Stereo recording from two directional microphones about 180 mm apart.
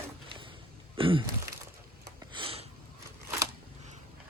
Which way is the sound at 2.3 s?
30° right (ahead or behind).